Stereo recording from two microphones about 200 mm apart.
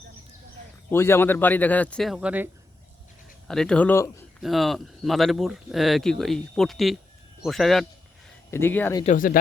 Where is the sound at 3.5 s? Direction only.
5° left (ahead or behind).